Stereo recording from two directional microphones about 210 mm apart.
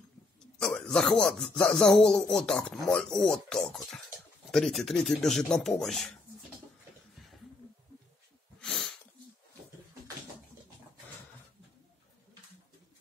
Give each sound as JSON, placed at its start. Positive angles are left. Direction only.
{"t": 0.6, "sound": "a man's voice", "side_deg": 5}
{"t": 8.5, "sound": "snort", "side_deg": 0}